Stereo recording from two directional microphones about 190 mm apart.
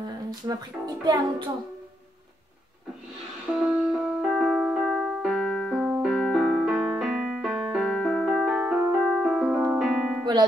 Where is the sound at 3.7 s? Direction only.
5° right (ahead or behind).